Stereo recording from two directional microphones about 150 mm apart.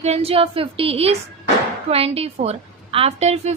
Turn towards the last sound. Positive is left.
turn(degrees=-45)  # may be behind; listen again after turning